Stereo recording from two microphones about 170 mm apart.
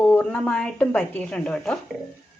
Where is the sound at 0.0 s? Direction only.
10° left (ahead or behind).